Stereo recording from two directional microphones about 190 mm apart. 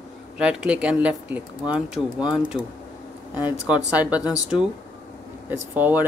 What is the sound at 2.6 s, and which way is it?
Speech, 25° left (ahead or behind).